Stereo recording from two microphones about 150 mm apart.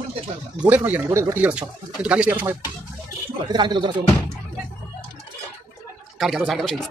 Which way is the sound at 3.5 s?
30° right (ahead or behind).